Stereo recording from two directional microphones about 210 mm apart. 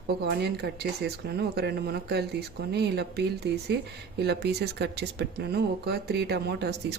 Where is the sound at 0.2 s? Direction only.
50° right (ahead or behind).